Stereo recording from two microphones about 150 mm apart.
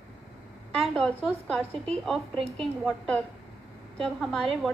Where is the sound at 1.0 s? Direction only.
5° left (ahead or behind).